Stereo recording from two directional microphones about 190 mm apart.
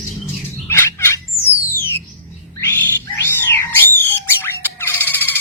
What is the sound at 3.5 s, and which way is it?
Squawk, 10° left (ahead or behind).